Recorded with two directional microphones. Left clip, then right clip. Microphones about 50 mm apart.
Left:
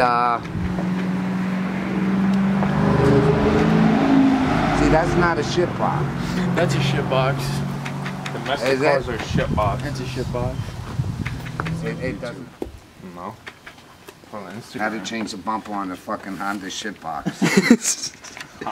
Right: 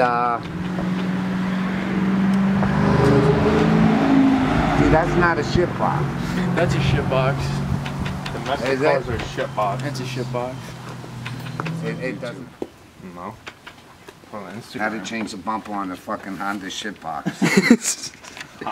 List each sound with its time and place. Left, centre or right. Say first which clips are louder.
0.0 s vehicle: left 1 dB; left
0.8 s vehicle: right 1 dB; right
1.9 s vehicle: even; right
2.4 s vehicle: even; centre
2.7 s vehicle: even; right
3.3 s vehicle: even; centre; by 5.4 s left
5.8 s speech: right 1 dB; centre
6.1 s speech: even; centre
6.5 s speech: even; left
8.3 s vehicle: left 1 dB; left
8.6 s speech: left 1 dB; left
9.8 s speech: even; right
11.8 s speech: right 2 dB; centre
14.3 s speech: even; centre